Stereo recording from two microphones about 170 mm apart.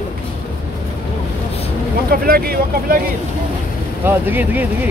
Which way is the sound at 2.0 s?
60° right (ahead or behind).